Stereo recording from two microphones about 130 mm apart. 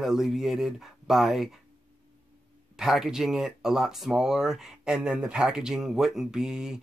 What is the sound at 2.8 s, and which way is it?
Speech, 5° right (ahead or behind).